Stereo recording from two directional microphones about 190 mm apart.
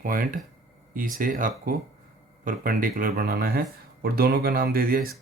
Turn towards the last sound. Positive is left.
turn(degrees=-50)  # may be behind; listen again after turning